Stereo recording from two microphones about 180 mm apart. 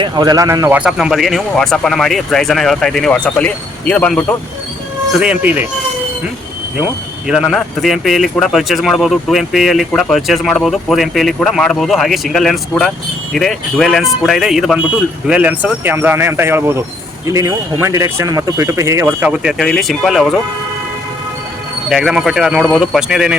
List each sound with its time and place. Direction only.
0.0 s speech: 20° right (ahead or behind)
0.8 s speech: 5° right (ahead or behind)
5.2 s speech: 10° right (ahead or behind)
7.3 s speech: centre (ahead or behind)
21.8 s speech: 5° right (ahead or behind)